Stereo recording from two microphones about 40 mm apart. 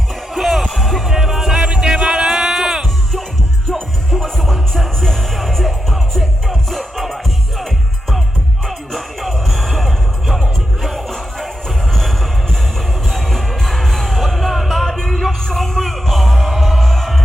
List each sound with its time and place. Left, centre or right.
0.3 s music: centre
1.6 s music: right
3.7 s music: centre
8.6 s music: centre